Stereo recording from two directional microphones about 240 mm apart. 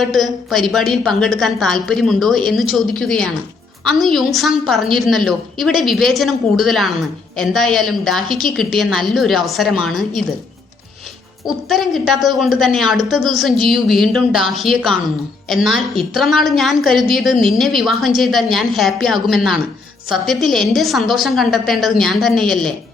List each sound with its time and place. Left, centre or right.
0.0 s a woman's voice: centre
11.4 s a woman's voice: centre